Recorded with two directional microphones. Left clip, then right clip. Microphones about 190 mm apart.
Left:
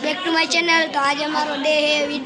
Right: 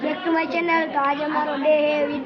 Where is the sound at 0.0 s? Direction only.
5° right (ahead or behind).